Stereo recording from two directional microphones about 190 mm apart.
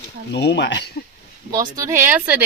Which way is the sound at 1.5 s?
15° right (ahead or behind).